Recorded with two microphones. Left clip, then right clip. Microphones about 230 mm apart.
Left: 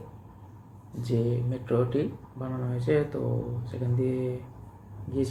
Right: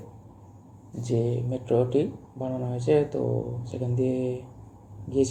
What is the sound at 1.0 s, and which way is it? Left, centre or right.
Speech, centre.